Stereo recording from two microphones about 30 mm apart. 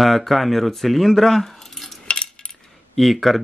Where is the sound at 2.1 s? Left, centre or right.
Left.